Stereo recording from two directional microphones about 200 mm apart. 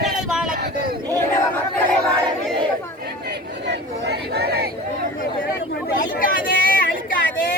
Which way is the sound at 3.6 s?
55° right (ahead or behind).